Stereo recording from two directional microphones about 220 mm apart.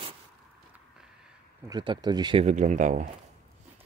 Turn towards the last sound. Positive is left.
turn(degrees=-35)  # may be behind; listen again after turning